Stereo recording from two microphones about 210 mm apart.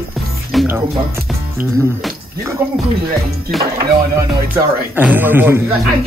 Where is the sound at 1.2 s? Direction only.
10° right (ahead or behind).